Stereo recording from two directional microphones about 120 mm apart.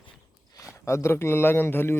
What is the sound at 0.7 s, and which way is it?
Speech, 25° left (ahead or behind).